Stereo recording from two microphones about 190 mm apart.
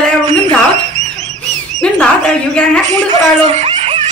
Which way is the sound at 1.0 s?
40° right (ahead or behind).